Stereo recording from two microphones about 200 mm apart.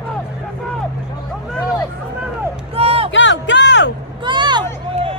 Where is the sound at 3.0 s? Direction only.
65° left (ahead or behind).